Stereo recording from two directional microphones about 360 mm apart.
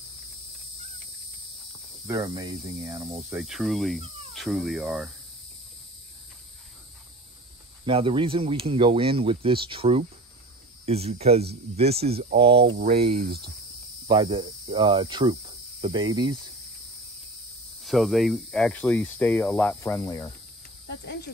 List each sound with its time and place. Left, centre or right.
2.0 s speech: centre
7.8 s speech: centre
17.8 s speech: centre
20.8 s cricket: left